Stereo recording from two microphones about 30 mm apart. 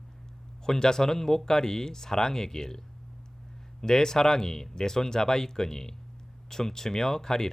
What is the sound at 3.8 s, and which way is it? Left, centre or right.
Speech, left.